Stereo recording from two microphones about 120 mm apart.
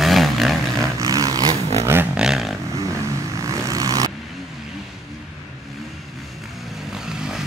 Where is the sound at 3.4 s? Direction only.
25° right (ahead or behind).